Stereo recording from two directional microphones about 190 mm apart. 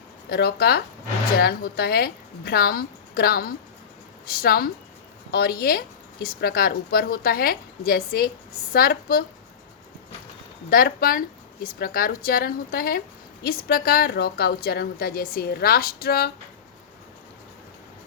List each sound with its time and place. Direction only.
0.3 s a woman's voice: 55° left (ahead or behind)
10.7 s a woman's voice: 50° left (ahead or behind)